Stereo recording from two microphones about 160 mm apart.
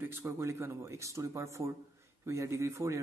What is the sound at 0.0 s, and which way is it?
Speech, 15° right (ahead or behind).